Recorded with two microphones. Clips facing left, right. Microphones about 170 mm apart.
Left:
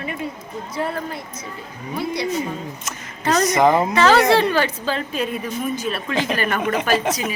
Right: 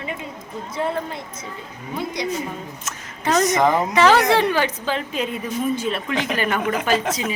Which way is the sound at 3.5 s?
5° left (ahead or behind).